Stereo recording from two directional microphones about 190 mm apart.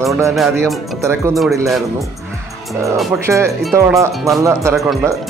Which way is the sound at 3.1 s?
15° right (ahead or behind).